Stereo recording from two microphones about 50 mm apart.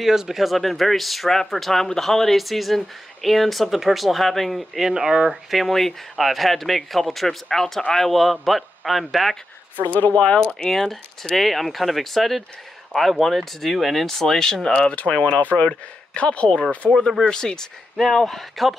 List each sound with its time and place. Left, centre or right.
0.0 s speech: centre
9.8 s speech: left
10.7 s speech: centre
14.8 s speech: left; by 18.8 s centre